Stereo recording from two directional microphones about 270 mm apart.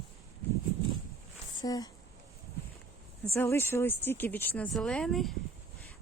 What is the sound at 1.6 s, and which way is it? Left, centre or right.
Speech, centre.